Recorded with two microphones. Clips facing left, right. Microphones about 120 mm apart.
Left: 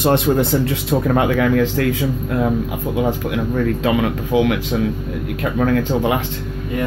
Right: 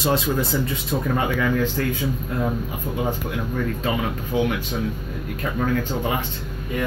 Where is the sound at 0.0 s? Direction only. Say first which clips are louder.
Left 6 dB; 60° left (ahead or behind); by 4.6 s 90° left.